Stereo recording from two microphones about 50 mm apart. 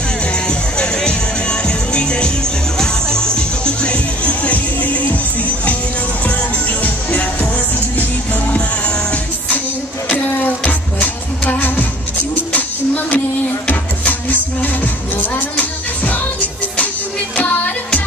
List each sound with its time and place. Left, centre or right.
0.5 s music: centre
6.8 s music: left
10.0 s music: left